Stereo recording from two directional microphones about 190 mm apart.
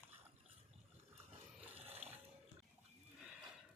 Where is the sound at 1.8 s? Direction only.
35° right (ahead or behind).